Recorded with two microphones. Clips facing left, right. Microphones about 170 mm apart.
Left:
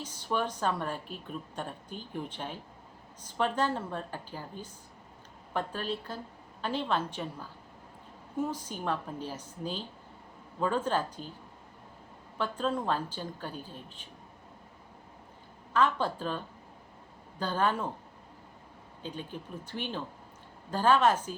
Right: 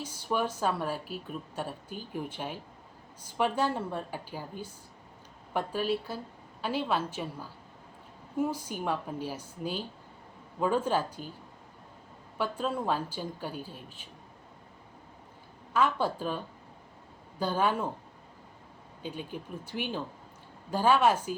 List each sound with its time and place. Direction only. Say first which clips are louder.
0.0 s a woman's voice: right 1 dB; 10° right (ahead or behind)
12.4 s a woman's voice: even; 10° right (ahead or behind)
15.7 s a woman's voice: even; 10° right (ahead or behind)
17.4 s a woman's voice: right 1 dB; 10° right (ahead or behind)
19.0 s a woman's voice: right 2 dB; 10° right (ahead or behind)